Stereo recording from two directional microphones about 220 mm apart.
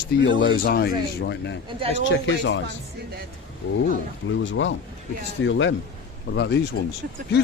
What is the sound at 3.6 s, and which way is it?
Speech, 50° left (ahead or behind).